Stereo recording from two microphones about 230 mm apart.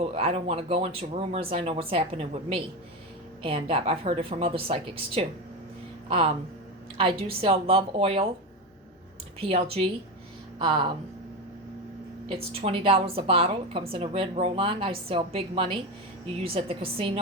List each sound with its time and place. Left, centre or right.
0.0 s a woman's voice: right
9.4 s a woman's voice: right
12.5 s a woman's voice: right